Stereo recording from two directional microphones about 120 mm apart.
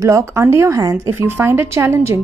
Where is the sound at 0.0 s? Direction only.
25° right (ahead or behind).